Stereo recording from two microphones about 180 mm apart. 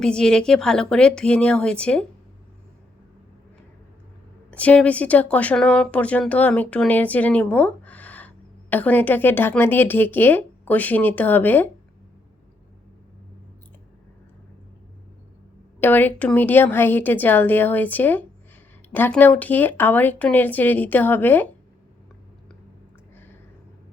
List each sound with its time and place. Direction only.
0.0 s speech: 5° left (ahead or behind)
4.5 s speech: 5° left (ahead or behind)
15.8 s speech: 10° left (ahead or behind)